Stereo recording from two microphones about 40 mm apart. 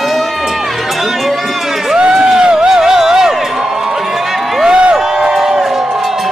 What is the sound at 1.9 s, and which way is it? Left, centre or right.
Crowd, centre.